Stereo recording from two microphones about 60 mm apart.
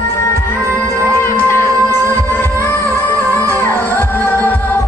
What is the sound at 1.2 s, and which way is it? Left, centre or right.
Music, left.